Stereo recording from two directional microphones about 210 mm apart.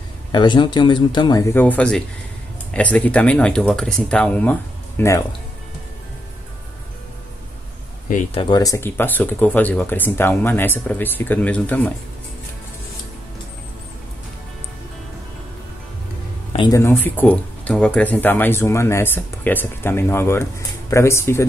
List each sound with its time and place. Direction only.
0.3 s speech: 20° left (ahead or behind)
8.4 s speech: 20° left (ahead or behind)
16.5 s speech: 15° left (ahead or behind)